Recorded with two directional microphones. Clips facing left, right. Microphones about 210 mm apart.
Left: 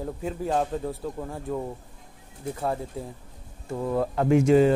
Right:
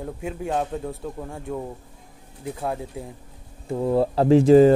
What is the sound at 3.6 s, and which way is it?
Speech, 25° right (ahead or behind).